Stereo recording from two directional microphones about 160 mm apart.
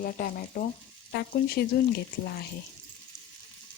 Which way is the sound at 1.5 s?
80° left.